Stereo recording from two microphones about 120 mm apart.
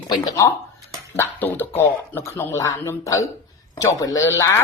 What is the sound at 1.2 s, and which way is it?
Speech, 15° left (ahead or behind).